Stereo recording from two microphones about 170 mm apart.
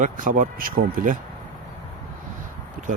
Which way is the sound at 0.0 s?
50° right (ahead or behind).